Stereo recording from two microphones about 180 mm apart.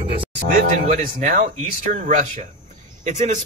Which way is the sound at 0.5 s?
45° right (ahead or behind).